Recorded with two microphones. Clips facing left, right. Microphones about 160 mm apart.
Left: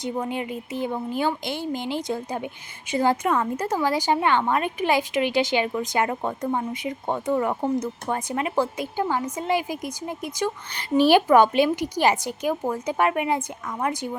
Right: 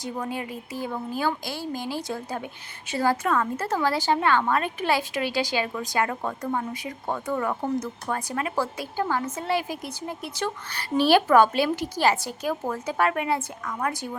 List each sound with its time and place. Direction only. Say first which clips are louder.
0.0 s a woman's voice: left 3 dB; 20° left (ahead or behind)